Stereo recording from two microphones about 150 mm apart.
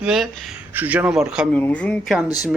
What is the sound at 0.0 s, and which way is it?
Speech, centre (ahead or behind).